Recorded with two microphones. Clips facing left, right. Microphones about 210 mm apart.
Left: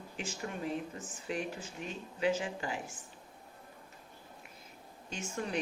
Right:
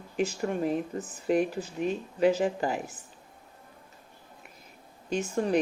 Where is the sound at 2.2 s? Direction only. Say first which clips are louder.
Right 8 dB; 40° right (ahead or behind).